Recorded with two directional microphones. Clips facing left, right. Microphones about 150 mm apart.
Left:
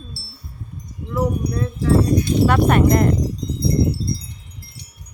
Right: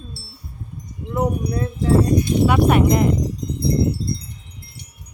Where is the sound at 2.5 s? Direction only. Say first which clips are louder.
Even; 10° right (ahead or behind).